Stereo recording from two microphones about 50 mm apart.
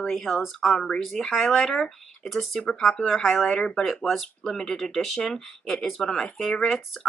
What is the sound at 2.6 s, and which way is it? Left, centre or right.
Speech, centre.